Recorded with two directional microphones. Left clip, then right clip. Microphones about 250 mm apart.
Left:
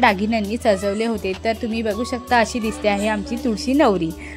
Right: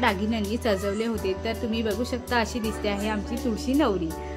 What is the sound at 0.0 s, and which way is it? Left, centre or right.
A woman's voice, left.